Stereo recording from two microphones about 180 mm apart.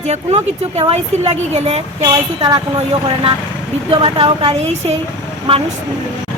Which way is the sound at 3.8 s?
30° right (ahead or behind).